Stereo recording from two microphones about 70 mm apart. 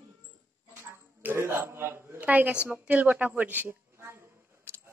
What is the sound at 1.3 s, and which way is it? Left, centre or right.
Speech, right.